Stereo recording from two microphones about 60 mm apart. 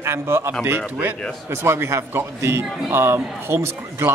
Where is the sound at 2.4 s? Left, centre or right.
Right.